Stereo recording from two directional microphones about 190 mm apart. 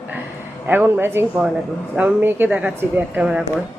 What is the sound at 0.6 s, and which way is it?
Speech, 10° right (ahead or behind).